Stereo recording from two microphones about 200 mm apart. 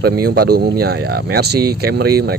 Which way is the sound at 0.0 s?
50° right (ahead or behind).